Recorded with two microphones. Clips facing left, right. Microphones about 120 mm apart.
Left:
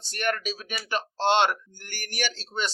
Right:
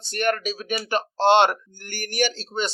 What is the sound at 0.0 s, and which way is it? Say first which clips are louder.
Speech: right 5 dB; 55° right (ahead or behind).